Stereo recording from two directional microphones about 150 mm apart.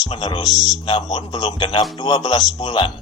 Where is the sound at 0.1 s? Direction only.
30° left (ahead or behind).